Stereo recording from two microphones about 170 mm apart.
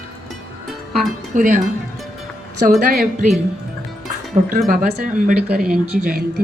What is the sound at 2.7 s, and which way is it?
Speech, 65° right (ahead or behind).